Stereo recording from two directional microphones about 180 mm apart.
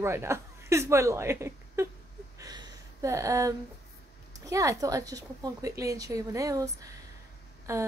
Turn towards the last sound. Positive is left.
turn(degrees=-15)  # may be behind; listen again after turning